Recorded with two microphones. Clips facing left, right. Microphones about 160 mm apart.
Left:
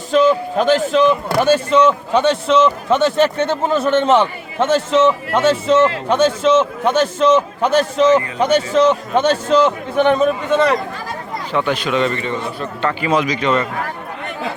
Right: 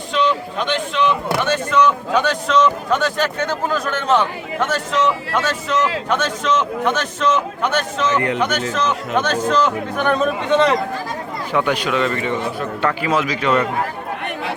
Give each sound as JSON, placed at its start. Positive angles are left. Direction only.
{"t": 0.1, "sound": "a man's voice", "side_deg": 45}
{"t": 11.5, "sound": "speech", "side_deg": -10}